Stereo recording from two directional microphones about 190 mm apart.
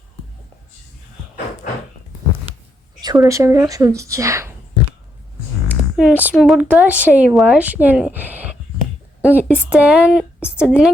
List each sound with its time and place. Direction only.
3.0 s speech: 20° right (ahead or behind)
5.6 s a woman's voice: 5° right (ahead or behind)